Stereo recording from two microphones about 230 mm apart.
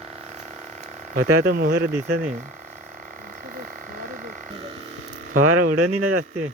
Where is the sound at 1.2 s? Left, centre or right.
Right.